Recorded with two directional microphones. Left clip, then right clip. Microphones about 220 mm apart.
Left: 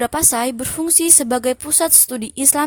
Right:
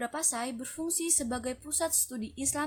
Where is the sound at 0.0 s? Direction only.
45° left (ahead or behind).